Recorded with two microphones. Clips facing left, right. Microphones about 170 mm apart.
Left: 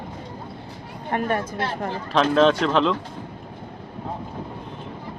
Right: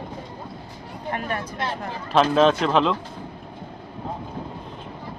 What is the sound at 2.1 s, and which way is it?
Speech, 5° right (ahead or behind).